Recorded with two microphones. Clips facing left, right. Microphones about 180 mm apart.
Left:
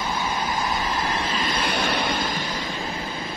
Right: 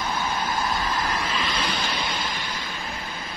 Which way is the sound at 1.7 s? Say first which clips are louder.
Left 4 dB; 60° left (ahead or behind).